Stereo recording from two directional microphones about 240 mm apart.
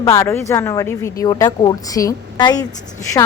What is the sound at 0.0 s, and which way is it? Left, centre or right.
A woman's voice, centre.